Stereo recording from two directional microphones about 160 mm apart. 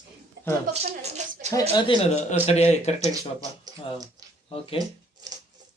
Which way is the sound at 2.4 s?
40° left (ahead or behind).